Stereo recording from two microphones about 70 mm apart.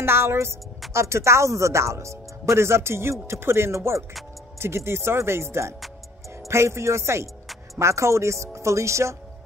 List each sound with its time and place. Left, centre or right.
0.0 s a woman's voice: right